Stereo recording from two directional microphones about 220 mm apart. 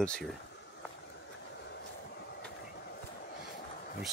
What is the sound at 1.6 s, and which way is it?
Train, 50° left (ahead or behind).